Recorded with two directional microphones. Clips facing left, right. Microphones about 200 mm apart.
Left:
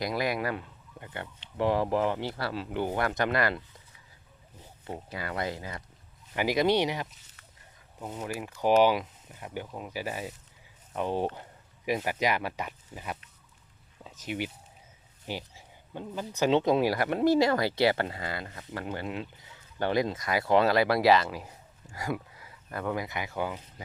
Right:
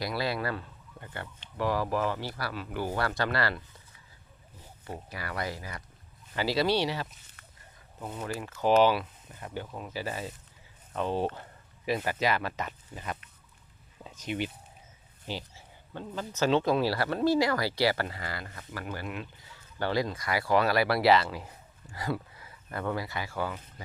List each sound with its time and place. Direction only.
0.0 s speech: 20° left (ahead or behind)
5.1 s speech: 20° left (ahead or behind)
7.1 s a sound: 55° right (ahead or behind)
8.0 s speech: 10° left (ahead or behind)
14.3 s speech: 10° left (ahead or behind)